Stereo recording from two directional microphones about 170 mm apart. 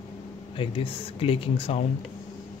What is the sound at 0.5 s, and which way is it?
Speech, 35° left (ahead or behind).